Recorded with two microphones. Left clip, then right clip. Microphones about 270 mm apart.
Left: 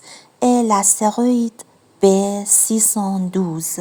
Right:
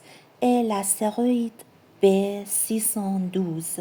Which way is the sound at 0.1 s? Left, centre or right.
Left.